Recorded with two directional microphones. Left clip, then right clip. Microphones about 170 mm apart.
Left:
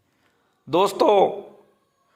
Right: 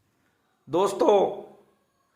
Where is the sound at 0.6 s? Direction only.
15° left (ahead or behind).